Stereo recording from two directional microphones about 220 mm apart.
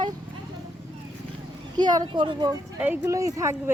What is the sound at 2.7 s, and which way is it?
Speech, 10° right (ahead or behind).